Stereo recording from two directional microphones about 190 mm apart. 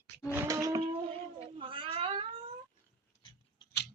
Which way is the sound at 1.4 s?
25° right (ahead or behind).